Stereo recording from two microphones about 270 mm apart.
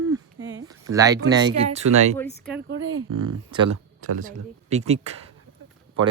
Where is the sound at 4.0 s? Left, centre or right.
Right.